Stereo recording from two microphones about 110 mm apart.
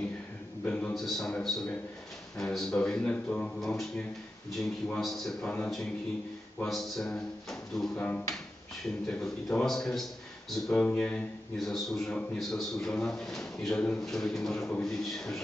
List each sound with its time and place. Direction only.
0.7 s a man's voice: 5° left (ahead or behind)
6.6 s a man's voice: 5° left (ahead or behind)
7.9 s a man's voice: 15° left (ahead or behind)
11.5 s a man's voice: centre (ahead or behind)